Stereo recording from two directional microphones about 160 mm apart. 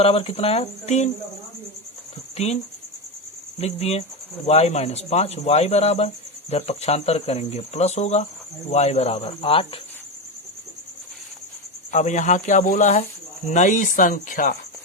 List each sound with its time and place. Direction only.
0.0 s speech: 35° left (ahead or behind)
2.3 s speech: 40° left (ahead or behind)
3.6 s speech: 40° left (ahead or behind)
11.9 s speech: 50° left (ahead or behind)